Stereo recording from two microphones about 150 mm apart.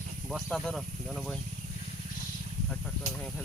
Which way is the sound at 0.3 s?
Centre (ahead or behind).